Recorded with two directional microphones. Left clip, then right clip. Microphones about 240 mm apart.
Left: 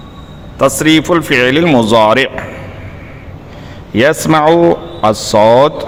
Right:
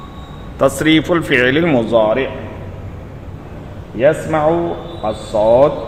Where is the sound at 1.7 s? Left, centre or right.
Left.